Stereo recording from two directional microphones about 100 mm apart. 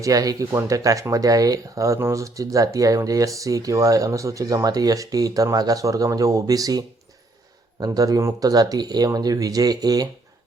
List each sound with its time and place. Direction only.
0.0 s speech: 35° right (ahead or behind)